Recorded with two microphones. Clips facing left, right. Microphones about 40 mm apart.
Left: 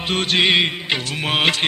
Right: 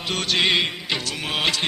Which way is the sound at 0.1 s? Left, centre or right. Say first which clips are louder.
Left 4 dB; left.